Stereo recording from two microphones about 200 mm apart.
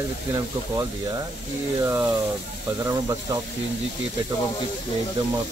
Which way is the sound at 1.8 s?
10° right (ahead or behind).